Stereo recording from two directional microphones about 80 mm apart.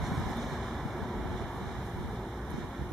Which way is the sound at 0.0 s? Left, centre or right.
Centre.